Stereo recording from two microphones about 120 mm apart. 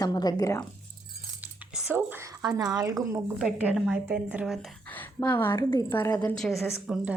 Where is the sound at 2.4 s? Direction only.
30° right (ahead or behind).